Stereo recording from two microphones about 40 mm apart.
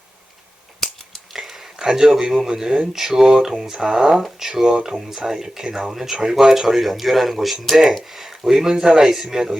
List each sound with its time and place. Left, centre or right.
1.4 s a sound: centre
2.5 s speech: centre
4.1 s speech: centre